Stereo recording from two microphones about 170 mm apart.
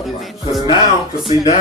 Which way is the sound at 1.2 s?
40° left (ahead or behind).